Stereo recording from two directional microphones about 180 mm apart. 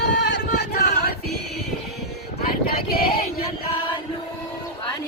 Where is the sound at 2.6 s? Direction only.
55° left (ahead or behind).